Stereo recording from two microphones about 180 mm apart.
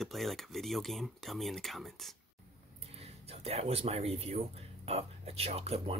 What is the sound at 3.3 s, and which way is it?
Speech, 35° right (ahead or behind).